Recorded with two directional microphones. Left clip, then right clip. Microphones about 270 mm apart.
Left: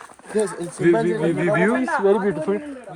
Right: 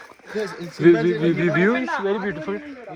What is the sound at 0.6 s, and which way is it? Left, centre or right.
Speech, centre.